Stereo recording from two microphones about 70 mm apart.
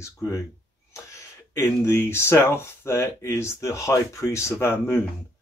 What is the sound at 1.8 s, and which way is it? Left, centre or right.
Speech, left.